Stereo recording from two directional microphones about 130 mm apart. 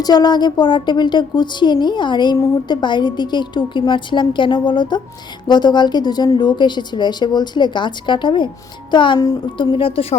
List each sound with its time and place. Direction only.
0.0 s a woman's voice: 30° left (ahead or behind); by 10.2 s 45° left (ahead or behind)